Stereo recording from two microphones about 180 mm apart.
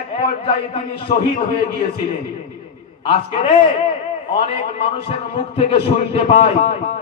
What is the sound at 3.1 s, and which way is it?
Speech, 30° left (ahead or behind).